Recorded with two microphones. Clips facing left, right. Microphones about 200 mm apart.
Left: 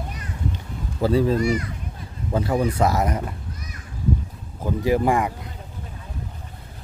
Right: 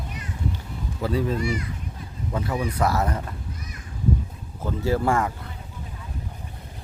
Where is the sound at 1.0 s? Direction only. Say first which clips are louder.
Left 6 dB; 30° left (ahead or behind).